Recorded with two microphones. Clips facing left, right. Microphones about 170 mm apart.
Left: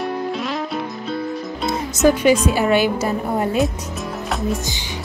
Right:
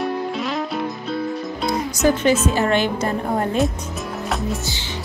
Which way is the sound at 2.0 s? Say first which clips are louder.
Left 3 dB; centre (ahead or behind).